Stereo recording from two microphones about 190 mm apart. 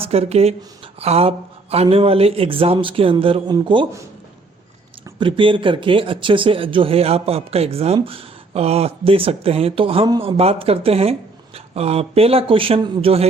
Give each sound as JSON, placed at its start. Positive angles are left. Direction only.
{"t": 0.0, "sound": "speech", "side_deg": -30}
{"t": 5.2, "sound": "speech", "side_deg": -25}